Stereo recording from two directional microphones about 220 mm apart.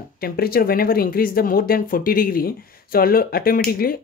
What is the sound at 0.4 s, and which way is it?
Speech, 40° left (ahead or behind).